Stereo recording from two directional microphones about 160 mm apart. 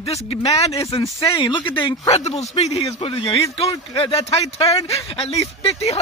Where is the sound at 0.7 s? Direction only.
20° left (ahead or behind).